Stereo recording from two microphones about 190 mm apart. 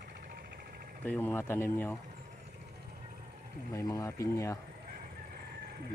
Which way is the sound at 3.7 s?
15° left (ahead or behind).